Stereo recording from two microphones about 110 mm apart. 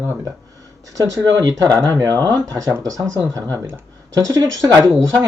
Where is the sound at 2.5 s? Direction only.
25° right (ahead or behind).